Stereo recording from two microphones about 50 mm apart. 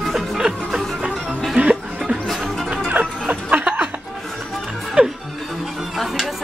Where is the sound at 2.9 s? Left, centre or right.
Right.